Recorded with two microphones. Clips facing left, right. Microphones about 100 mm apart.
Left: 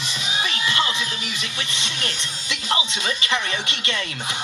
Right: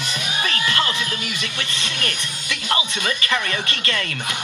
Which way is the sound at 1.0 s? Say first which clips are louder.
Right 2 dB; 55° right (ahead or behind).